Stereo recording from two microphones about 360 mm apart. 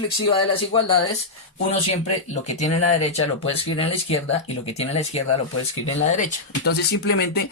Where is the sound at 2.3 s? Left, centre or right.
Centre.